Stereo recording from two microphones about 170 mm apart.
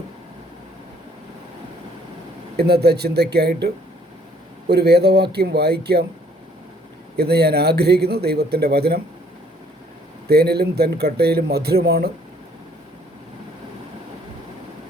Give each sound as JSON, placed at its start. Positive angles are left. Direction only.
{"t": 2.6, "sound": "speech", "side_deg": -70}
{"t": 4.7, "sound": "speech", "side_deg": -70}
{"t": 7.2, "sound": "speech", "side_deg": -70}
{"t": 10.2, "sound": "speech", "side_deg": -70}